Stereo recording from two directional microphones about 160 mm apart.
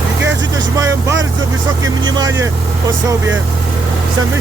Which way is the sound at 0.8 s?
20° right (ahead or behind).